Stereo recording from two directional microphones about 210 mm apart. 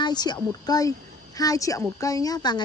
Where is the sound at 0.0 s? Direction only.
20° left (ahead or behind).